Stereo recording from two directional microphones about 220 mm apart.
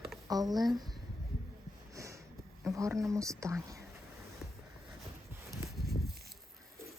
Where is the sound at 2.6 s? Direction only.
15° right (ahead or behind).